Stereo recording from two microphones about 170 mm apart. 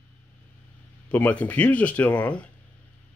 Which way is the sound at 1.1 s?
10° left (ahead or behind).